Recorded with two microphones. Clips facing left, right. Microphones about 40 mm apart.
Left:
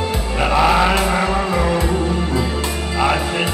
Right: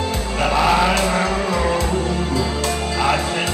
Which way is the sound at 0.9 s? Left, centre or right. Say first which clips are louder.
Left 1 dB; centre.